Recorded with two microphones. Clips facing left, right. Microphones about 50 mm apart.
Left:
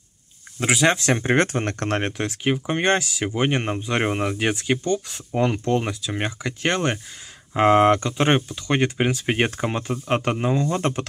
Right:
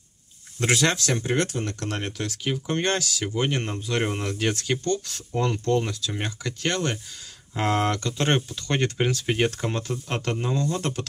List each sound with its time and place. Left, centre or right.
0.6 s speech: centre
0.9 s speech: left